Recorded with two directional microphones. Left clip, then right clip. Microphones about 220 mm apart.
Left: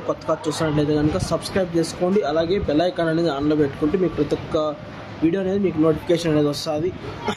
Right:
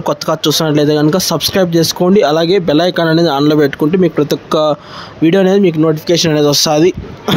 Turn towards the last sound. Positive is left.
turn(degrees=-50)  # may be behind; listen again after turning